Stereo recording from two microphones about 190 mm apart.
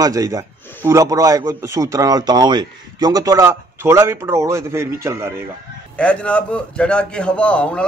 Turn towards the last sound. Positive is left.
turn(degrees=5)  # may be behind; listen again after turning